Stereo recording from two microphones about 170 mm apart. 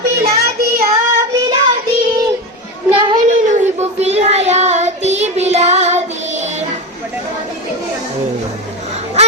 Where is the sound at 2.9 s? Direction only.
25° right (ahead or behind).